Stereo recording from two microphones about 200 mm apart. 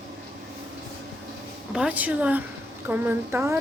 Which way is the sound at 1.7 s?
5° right (ahead or behind).